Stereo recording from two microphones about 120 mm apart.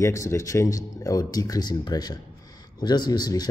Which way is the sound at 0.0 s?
25° left (ahead or behind).